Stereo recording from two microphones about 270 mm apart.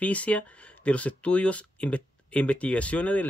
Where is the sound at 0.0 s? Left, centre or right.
Centre.